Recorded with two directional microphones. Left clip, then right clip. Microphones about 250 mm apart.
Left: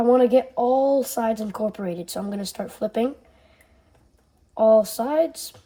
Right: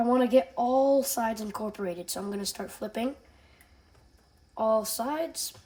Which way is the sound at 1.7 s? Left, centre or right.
Centre.